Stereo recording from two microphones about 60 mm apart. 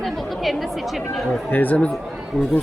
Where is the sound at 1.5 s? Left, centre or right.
Left.